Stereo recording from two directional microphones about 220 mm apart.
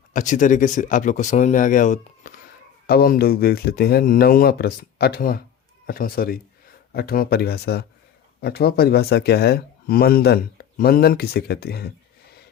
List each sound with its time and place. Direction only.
0.1 s speech: 35° left (ahead or behind)